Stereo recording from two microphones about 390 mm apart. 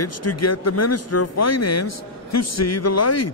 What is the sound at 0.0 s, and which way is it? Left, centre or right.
Speech, left.